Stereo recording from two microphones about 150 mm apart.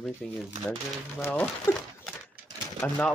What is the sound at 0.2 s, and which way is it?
Speech, centre (ahead or behind).